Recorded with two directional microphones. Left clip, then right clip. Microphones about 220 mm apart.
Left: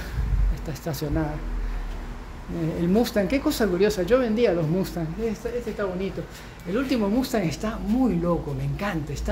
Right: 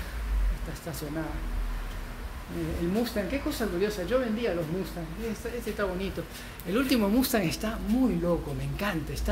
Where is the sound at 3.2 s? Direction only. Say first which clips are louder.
Left 8 dB; 55° left (ahead or behind).